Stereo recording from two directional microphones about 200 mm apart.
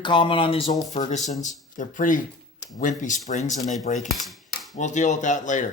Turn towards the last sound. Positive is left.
turn(degrees=40)  # may be behind; listen again after turning